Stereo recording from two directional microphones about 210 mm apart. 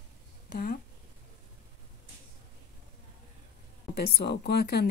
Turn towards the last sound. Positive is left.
turn(degrees=50)  # may be behind; listen again after turning